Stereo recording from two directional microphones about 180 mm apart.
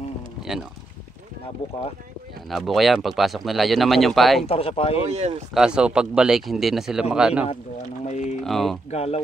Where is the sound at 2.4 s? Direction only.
Centre (ahead or behind).